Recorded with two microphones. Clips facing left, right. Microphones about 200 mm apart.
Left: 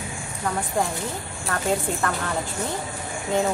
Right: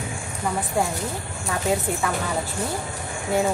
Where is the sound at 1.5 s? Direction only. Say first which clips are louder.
Right 1 dB; 5° right (ahead or behind).